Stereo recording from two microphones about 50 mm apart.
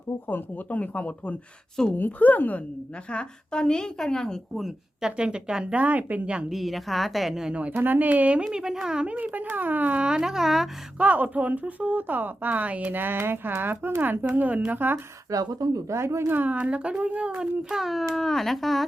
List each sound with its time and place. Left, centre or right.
0.3 s a woman's voice: left
3.1 s speech: centre
4.9 s speech: centre; by 6.3 s right
6.5 s speech: centre
7.7 s a woman's voice: right
8.5 s speech: centre
9.0 s a woman's voice: right
10.0 s speech: centre
10.9 s a woman's voice: right
15.9 s speech: right
16.3 s speech: right; by 17.7 s centre
17.7 s speech: centre